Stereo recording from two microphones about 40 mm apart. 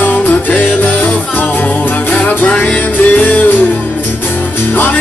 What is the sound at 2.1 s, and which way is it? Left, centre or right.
Music, left.